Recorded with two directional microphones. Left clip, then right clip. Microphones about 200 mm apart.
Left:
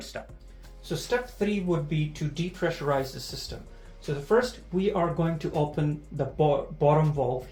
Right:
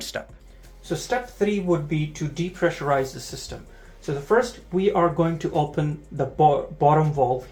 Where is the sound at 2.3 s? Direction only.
30° right (ahead or behind).